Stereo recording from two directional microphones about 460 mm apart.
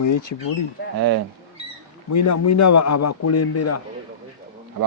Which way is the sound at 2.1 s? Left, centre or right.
Left.